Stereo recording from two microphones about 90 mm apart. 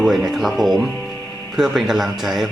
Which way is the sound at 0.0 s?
Centre (ahead or behind).